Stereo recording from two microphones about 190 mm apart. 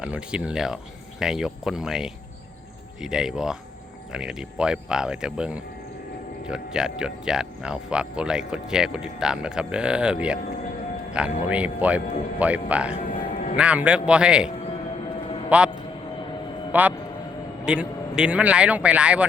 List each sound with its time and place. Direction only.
0.0 s speech: 5° right (ahead or behind)
13.3 s music: 35° left (ahead or behind)
13.6 s a man's voice: 5° right (ahead or behind)
16.7 s speech: 10° right (ahead or behind)